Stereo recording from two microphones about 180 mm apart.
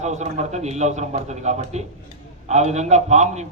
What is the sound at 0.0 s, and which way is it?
A man's voice, 40° right (ahead or behind).